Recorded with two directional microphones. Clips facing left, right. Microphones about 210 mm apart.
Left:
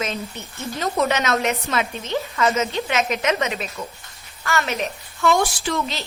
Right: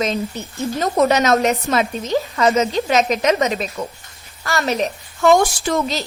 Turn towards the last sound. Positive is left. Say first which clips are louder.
# right 5 dB
turn(degrees=-40)  # may be behind; listen again after turning